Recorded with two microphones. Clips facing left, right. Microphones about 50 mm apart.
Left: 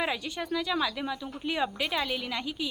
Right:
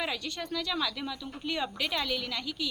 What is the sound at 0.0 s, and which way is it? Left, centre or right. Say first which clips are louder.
Speech: left 3 dB; centre.